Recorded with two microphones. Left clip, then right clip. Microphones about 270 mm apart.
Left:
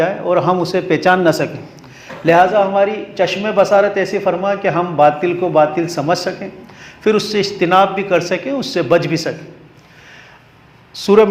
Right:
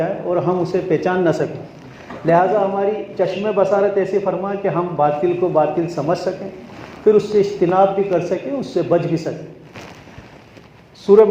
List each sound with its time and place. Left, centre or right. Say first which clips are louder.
0.0 s a man's voice: left 5 dB; left
8.2 s a man's voice: left 3 dB; left
11.0 s a man's voice: even; left